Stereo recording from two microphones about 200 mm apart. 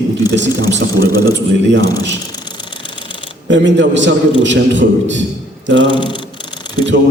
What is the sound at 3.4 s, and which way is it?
A man's voice, 65° right (ahead or behind).